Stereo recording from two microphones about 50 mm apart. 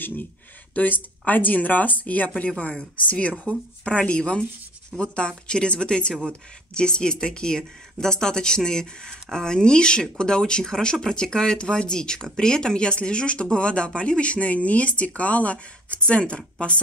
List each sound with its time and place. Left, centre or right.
0.0 s speech: left; by 16.8 s centre